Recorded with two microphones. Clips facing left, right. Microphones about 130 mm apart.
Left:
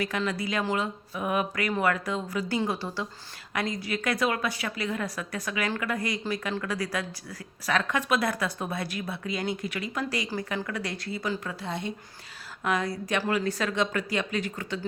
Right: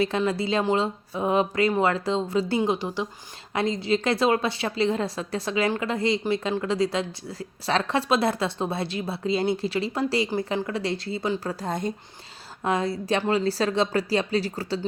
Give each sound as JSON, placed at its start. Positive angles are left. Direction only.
{"t": 0.0, "sound": "a woman's voice", "side_deg": -25}
{"t": 11.6, "sound": "speech", "side_deg": -45}
{"t": 12.6, "sound": "speech", "side_deg": -30}